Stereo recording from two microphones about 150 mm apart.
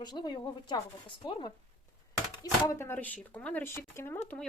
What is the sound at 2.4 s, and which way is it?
Speech, 20° left (ahead or behind).